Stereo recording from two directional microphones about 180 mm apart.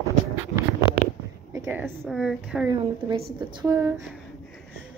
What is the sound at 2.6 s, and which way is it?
A woman's voice, 20° right (ahead or behind).